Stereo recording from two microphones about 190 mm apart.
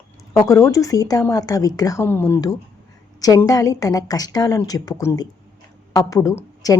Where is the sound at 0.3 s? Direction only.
15° left (ahead or behind).